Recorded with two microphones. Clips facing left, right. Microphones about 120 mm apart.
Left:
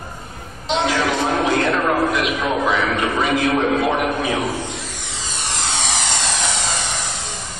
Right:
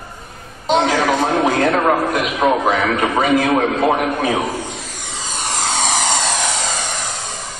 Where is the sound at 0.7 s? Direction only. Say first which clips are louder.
Right 4 dB; 45° right (ahead or behind).